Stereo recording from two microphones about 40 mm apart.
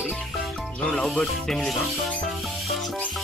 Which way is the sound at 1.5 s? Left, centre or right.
Centre.